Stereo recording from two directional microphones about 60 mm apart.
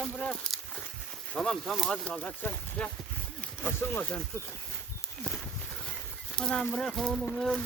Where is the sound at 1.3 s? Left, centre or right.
Centre.